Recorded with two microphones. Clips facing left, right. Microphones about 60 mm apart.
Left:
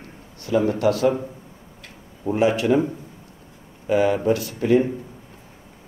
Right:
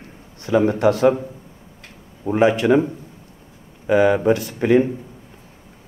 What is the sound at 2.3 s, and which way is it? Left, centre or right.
Speech, right.